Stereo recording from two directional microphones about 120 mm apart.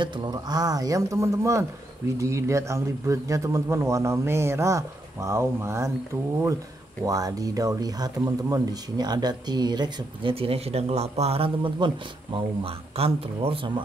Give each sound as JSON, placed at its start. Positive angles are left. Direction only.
{"t": 0.0, "sound": "a man's voice", "side_deg": -35}
{"t": 7.1, "sound": "speech", "side_deg": -30}
{"t": 10.3, "sound": "speech", "side_deg": -55}